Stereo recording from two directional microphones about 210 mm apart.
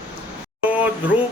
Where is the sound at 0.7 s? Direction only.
5° right (ahead or behind).